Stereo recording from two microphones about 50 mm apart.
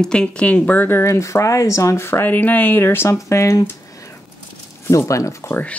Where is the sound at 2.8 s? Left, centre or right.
Left.